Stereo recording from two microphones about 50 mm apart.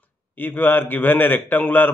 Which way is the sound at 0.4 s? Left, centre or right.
Left.